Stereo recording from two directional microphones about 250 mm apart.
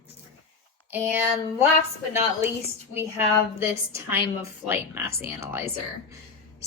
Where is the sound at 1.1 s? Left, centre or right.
Centre.